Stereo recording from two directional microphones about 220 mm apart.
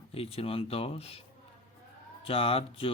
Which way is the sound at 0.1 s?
25° left (ahead or behind).